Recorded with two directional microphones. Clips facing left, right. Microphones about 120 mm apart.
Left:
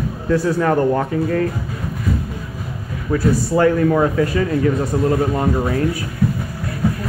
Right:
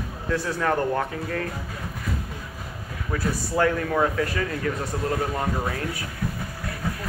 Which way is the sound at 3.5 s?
10° left (ahead or behind).